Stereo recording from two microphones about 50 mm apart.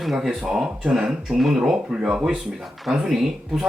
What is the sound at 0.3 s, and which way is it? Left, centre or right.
Speech, centre.